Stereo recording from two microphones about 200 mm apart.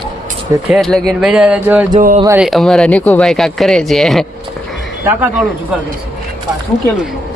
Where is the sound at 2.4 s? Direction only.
Centre (ahead or behind).